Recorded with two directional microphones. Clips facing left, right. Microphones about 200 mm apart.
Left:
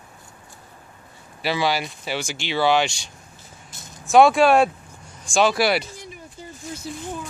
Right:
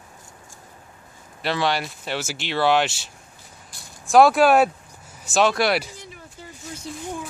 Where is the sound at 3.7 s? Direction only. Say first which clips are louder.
Left 4 dB; 20° left (ahead or behind).